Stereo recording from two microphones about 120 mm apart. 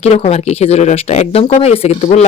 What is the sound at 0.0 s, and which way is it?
Speech, 60° left (ahead or behind).